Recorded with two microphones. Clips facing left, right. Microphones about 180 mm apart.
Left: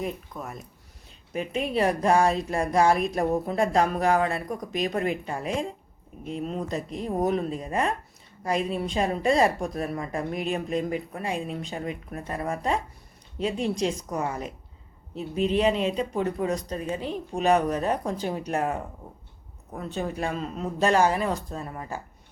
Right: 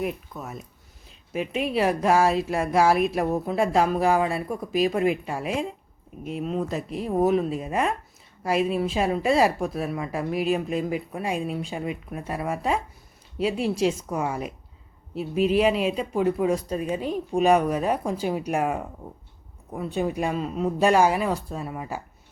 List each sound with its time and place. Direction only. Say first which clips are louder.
0.0 s a woman's voice: right 2 dB; 5° right (ahead or behind)